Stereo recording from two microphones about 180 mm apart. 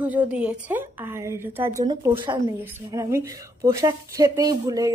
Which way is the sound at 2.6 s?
15° right (ahead or behind).